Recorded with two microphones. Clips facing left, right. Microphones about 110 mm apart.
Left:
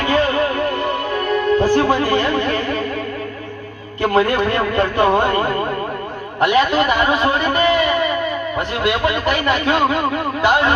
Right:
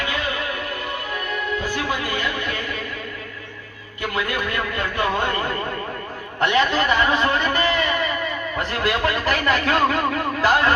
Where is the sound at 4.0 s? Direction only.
35° left (ahead or behind).